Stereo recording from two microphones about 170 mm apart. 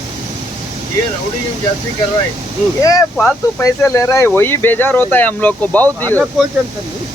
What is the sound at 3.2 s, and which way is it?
Speech, 15° left (ahead or behind).